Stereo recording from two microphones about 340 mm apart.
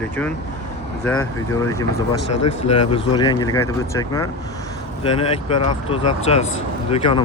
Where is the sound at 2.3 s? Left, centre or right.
Left.